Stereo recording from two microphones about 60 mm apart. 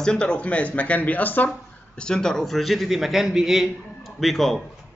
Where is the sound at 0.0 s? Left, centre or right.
Centre.